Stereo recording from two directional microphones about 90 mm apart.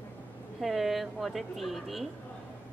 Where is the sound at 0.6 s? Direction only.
Centre (ahead or behind).